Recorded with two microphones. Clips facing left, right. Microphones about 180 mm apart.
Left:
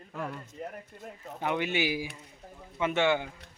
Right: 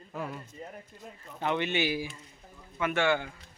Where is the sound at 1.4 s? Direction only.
10° left (ahead or behind).